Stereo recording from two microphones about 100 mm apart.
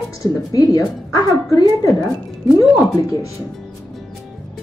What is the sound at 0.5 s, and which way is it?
A woman's voice, 35° left (ahead or behind).